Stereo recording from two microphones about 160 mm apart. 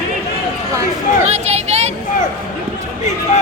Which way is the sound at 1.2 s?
45° right (ahead or behind).